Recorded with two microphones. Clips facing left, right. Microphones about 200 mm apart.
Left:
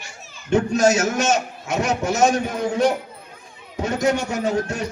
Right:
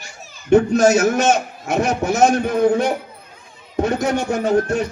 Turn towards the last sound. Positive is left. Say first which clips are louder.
# right 5 dB
turn(degrees=-55)  # may be behind; listen again after turning